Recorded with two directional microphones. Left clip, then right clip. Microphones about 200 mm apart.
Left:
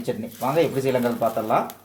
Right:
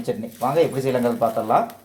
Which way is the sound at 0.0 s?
5° right (ahead or behind).